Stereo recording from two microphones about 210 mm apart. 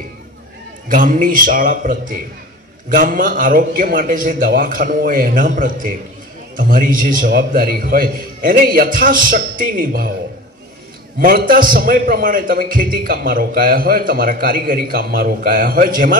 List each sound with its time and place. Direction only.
0.8 s a man's voice: 40° right (ahead or behind)
11.1 s a man's voice: 45° right (ahead or behind)